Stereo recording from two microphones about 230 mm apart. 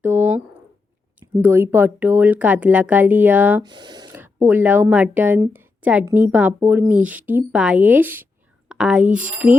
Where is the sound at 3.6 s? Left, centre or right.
Centre.